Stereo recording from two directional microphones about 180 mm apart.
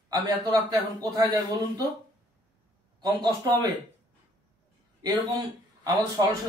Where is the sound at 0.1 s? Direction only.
20° right (ahead or behind).